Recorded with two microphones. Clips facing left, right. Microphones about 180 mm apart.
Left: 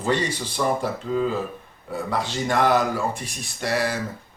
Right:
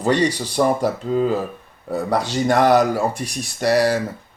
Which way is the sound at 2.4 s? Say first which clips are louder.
Right 5 dB; 40° right (ahead or behind).